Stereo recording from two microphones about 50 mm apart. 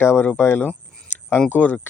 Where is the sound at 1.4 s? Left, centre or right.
Left.